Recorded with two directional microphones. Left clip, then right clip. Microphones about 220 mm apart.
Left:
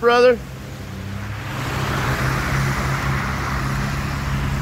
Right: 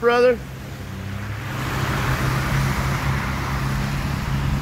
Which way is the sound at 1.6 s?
45° right (ahead or behind).